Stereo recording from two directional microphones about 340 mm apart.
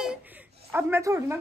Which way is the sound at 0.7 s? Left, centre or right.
Centre.